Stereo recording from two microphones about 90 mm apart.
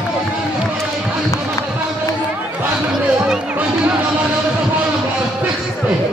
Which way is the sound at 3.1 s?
10° right (ahead or behind).